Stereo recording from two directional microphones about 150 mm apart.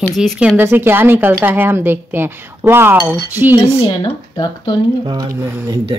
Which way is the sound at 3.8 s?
30° left (ahead or behind).